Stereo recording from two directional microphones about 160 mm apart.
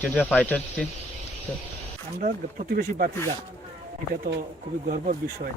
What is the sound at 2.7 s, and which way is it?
Speech, 65° right (ahead or behind).